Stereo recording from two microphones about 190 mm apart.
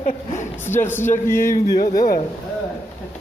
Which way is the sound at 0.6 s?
10° left (ahead or behind).